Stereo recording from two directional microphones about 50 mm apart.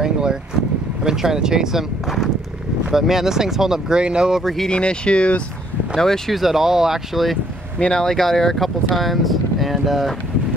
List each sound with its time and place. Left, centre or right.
0.0 s a sound: centre
1.0 s speech: centre
4.4 s speech: centre
4.6 s speech: centre
5.9 s speech: centre
6.3 s speech: centre
7.8 s speech: centre